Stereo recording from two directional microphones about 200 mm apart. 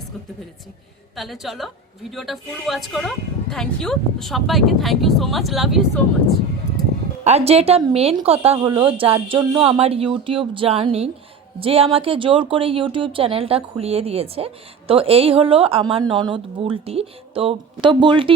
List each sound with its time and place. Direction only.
1.1 s a woman's voice: centre (ahead or behind)
7.3 s speech: 30° right (ahead or behind)